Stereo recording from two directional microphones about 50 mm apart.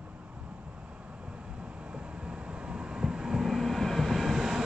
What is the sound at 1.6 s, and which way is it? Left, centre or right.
Vehicle, right.